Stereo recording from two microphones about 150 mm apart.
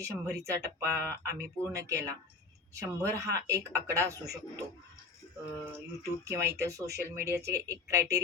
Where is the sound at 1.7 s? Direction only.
20° right (ahead or behind).